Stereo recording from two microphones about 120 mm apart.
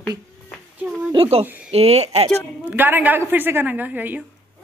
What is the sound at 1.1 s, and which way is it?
Speech, 55° right (ahead or behind).